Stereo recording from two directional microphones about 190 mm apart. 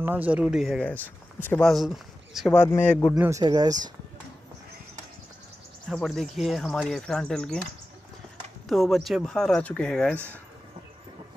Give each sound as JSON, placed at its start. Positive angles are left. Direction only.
{"t": 0.0, "sound": "speech", "side_deg": -10}
{"t": 3.2, "sound": "speech", "side_deg": -15}
{"t": 5.9, "sound": "speech", "side_deg": 0}
{"t": 8.6, "sound": "speech", "side_deg": 0}